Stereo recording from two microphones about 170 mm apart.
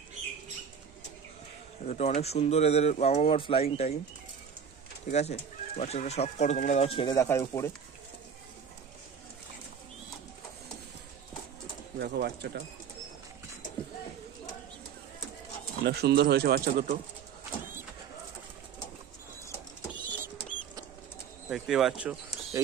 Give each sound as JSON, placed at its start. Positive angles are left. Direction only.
{"t": 1.9, "sound": "speech", "side_deg": 40}
{"t": 5.0, "sound": "speech", "side_deg": 40}
{"t": 7.1, "sound": "speech", "side_deg": 20}
{"t": 12.0, "sound": "speech", "side_deg": -75}
{"t": 15.8, "sound": "speech", "side_deg": -75}
{"t": 19.5, "sound": "vehicle", "side_deg": 15}
{"t": 21.5, "sound": "speech", "side_deg": 0}